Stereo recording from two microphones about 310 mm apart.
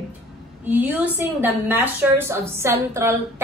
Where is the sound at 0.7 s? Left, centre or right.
Centre.